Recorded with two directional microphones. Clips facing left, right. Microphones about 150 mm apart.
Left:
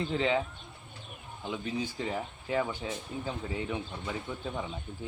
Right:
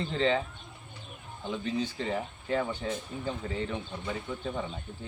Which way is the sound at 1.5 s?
10° left (ahead or behind).